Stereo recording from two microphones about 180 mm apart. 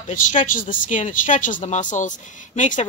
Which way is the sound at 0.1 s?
45° left (ahead or behind).